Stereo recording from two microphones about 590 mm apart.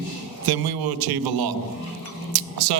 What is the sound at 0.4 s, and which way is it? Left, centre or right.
Speech, right.